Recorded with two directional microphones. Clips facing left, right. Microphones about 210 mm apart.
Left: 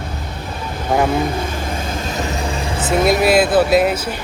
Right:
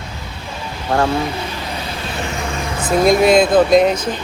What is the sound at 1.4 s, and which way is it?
Vehicle, 50° left (ahead or behind).